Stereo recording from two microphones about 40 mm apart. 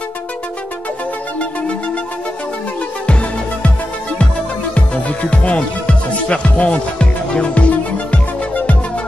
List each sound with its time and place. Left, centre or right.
4.7 s music: left